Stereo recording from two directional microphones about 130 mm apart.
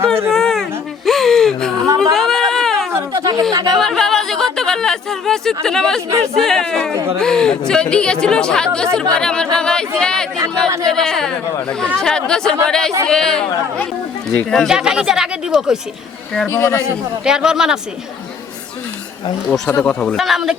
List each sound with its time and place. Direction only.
0.3 s a sound: 5° left (ahead or behind)
2.9 s a sound: 25° right (ahead or behind)
3.7 s speech: 5° left (ahead or behind)
16.5 s a man's voice: 20° left (ahead or behind)
17.2 s speech: 5° right (ahead or behind)
19.5 s speech: 5° left (ahead or behind)